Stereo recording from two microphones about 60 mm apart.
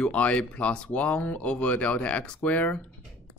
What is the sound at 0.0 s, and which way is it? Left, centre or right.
Speech, left.